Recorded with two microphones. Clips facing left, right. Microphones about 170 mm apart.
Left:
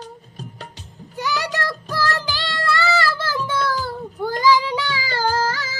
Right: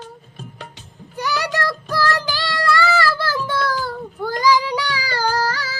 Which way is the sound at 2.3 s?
20° left (ahead or behind).